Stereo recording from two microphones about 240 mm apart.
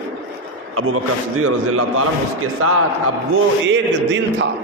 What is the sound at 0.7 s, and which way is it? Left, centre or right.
A man's voice, right.